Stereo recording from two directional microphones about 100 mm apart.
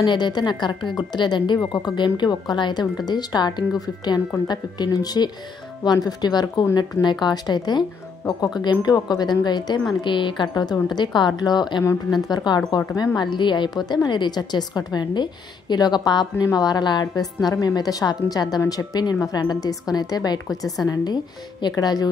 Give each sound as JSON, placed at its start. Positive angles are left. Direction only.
{"t": 0.0, "sound": "a woman's voice", "side_deg": 50}